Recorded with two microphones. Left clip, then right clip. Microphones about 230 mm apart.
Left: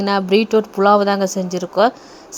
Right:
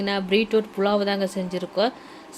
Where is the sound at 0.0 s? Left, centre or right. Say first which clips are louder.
Left 7 dB; left.